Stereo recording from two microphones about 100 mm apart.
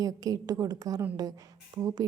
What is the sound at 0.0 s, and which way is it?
A woman's voice, 40° right (ahead or behind).